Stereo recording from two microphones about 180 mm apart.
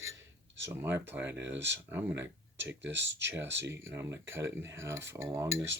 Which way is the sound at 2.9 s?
80° right.